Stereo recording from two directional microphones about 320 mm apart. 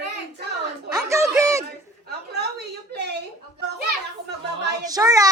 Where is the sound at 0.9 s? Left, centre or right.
Centre.